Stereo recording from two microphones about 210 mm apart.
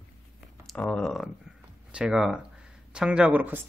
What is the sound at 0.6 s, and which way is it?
Speech, 5° left (ahead or behind).